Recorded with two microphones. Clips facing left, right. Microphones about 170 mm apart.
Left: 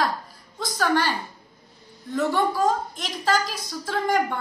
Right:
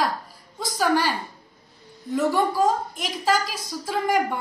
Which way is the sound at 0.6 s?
5° right (ahead or behind).